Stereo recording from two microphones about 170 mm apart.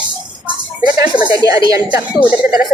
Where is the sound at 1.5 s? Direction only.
20° right (ahead or behind).